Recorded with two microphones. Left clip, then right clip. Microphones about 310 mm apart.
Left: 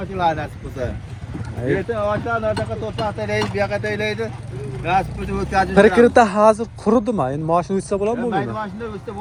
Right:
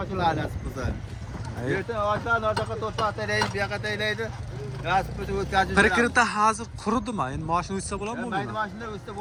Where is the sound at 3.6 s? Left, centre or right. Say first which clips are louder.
Left 7 dB; centre.